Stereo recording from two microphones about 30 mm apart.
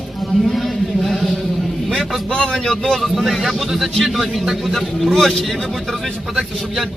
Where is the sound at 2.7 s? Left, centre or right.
Left.